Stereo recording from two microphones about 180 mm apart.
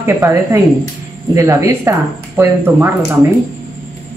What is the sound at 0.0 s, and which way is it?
Speech, 15° right (ahead or behind).